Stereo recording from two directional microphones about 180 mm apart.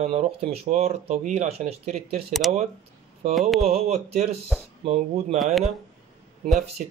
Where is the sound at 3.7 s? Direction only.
35° right (ahead or behind).